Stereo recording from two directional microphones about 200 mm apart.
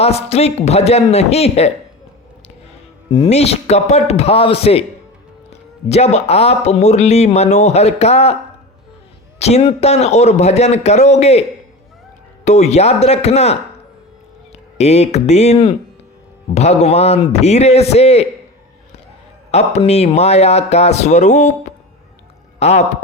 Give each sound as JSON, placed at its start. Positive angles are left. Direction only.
{"t": 0.0, "sound": "speech", "side_deg": 30}
{"t": 3.1, "sound": "speech", "side_deg": 30}
{"t": 9.4, "sound": "speech", "side_deg": 30}
{"t": 12.5, "sound": "speech", "side_deg": 35}
{"t": 19.5, "sound": "speech", "side_deg": 30}